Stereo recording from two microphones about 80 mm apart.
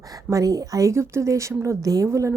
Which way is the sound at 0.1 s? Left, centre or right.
Right.